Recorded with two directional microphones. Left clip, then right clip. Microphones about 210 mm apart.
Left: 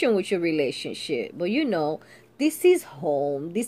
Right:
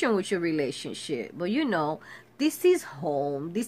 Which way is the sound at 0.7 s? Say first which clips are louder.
Left 4 dB; 55° right (ahead or behind).